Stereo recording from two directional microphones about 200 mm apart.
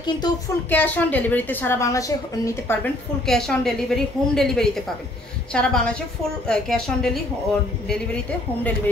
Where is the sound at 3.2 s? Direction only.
Centre (ahead or behind).